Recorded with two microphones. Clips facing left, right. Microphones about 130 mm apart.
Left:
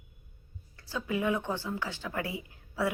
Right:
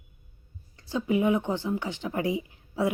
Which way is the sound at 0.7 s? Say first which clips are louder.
Right 7 dB; 25° right (ahead or behind).